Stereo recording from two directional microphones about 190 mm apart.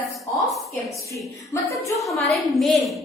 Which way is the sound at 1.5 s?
15° left (ahead or behind).